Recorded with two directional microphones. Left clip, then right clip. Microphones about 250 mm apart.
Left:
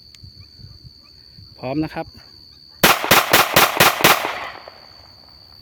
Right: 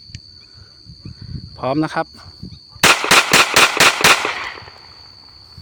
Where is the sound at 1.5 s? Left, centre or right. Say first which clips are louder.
Right 6 dB; centre.